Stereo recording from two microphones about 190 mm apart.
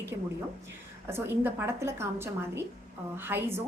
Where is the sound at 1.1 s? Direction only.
10° right (ahead or behind).